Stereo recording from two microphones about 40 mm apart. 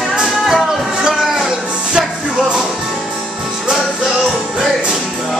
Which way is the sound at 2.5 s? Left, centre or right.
Centre.